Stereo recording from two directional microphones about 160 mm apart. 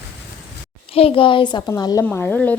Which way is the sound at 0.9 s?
35° left (ahead or behind).